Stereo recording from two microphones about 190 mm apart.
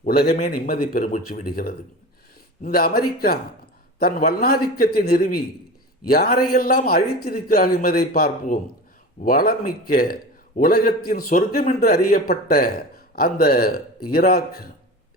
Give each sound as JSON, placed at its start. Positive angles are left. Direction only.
{"t": 0.0, "sound": "a man's voice", "side_deg": 50}